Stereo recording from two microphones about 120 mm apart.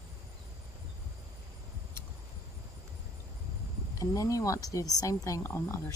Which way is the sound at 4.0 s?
30° left (ahead or behind).